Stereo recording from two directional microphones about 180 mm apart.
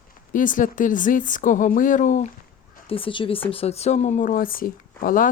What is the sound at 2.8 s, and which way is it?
A woman's voice, 30° left (ahead or behind).